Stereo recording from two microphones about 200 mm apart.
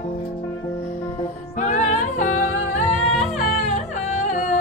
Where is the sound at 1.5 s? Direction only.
35° left (ahead or behind).